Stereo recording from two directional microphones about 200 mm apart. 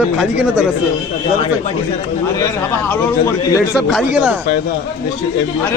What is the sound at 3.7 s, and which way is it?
Speech, centre (ahead or behind).